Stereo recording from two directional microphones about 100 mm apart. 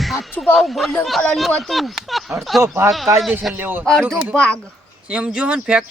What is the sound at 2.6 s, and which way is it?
Speech, 25° right (ahead or behind).